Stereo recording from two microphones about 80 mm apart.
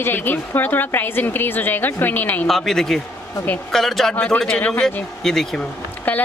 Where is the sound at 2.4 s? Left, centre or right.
Centre.